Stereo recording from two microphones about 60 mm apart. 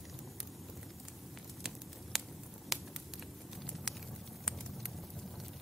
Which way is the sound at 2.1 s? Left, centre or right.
Centre.